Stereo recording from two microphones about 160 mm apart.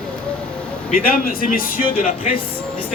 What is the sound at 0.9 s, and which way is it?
A man's voice, 60° left (ahead or behind).